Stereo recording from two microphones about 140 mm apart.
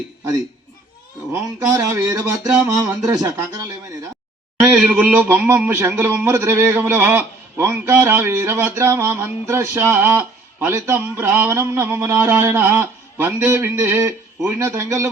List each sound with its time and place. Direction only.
1.3 s speech: 20° right (ahead or behind)
4.6 s a man's voice: 5° right (ahead or behind)